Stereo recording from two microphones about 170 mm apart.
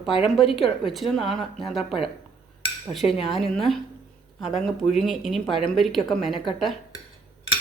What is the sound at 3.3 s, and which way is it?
Speech, centre (ahead or behind).